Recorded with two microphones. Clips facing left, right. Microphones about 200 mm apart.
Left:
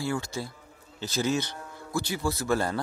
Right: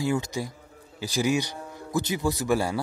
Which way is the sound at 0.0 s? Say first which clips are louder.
Right 4 dB; 15° right (ahead or behind).